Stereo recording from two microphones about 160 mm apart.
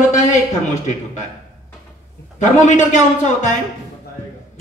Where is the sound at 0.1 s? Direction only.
50° left (ahead or behind).